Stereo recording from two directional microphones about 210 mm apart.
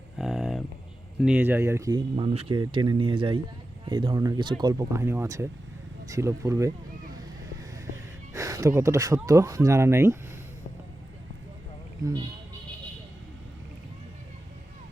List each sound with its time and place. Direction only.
0.2 s a sound: centre (ahead or behind)
1.2 s speech: 10° right (ahead or behind)
8.3 s speech: 15° right (ahead or behind)